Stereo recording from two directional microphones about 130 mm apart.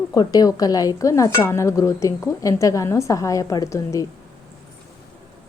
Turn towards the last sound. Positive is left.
turn(degrees=25)  # may be behind; listen again after turning